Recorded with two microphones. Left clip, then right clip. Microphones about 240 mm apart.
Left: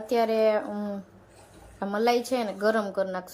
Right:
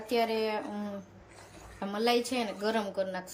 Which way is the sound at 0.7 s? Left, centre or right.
Centre.